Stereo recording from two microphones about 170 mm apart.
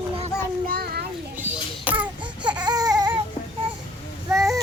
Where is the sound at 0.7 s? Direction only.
65° right (ahead or behind).